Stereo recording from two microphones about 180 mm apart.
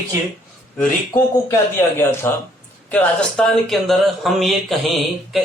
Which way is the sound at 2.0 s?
15° left (ahead or behind).